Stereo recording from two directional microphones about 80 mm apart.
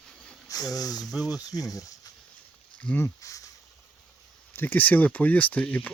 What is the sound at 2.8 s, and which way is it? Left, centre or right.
Speech, centre.